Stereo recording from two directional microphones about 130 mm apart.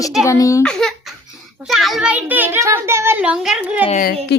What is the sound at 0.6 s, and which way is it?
A child's voice, 5° left (ahead or behind).